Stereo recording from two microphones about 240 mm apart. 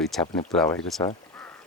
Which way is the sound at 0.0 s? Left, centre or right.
Centre.